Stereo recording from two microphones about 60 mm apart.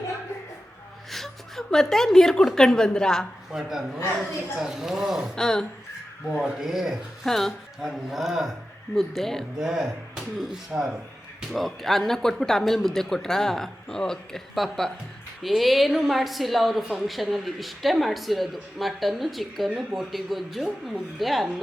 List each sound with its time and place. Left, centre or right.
1.1 s a woman's voice: centre
3.5 s speech: centre
5.3 s speech: centre
6.2 s a woman's voice: centre
9.6 s a woman's voice: centre
19.7 s speech: centre
20.1 s a woman's voice: centre